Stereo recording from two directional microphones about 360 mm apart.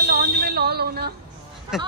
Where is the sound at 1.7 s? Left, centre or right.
Centre.